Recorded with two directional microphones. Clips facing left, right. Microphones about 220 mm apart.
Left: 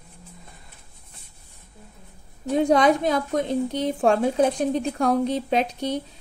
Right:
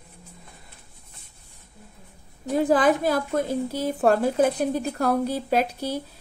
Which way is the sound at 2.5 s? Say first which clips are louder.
Left 1 dB; 5° right (ahead or behind).